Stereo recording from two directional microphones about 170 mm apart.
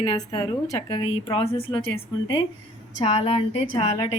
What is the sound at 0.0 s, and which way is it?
A woman's voice, 25° left (ahead or behind).